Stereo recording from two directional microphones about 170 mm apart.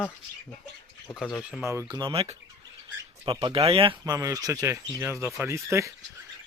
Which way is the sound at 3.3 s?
25° right (ahead or behind).